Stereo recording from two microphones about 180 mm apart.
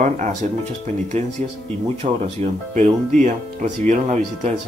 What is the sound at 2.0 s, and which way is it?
Speech, 40° right (ahead or behind).